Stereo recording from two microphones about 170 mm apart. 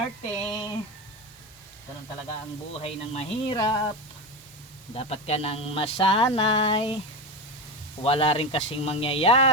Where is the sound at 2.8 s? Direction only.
35° left (ahead or behind).